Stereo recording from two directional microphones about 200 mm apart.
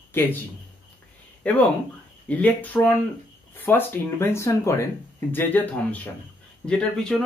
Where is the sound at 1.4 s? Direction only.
5° left (ahead or behind).